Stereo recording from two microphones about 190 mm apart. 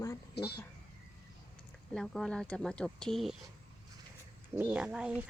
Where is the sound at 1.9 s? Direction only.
5° left (ahead or behind).